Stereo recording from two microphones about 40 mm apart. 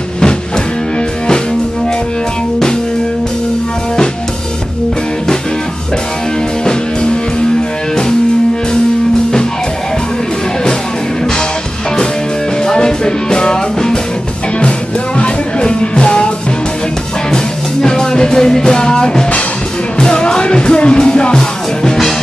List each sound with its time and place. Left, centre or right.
6.6 s music: left
12.6 s music: centre
15.1 s music: left
17.8 s music: centre